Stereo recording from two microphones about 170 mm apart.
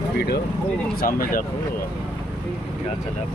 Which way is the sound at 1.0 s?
55° left (ahead or behind).